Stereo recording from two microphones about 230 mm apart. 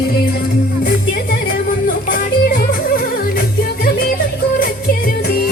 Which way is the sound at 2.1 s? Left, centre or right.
Left.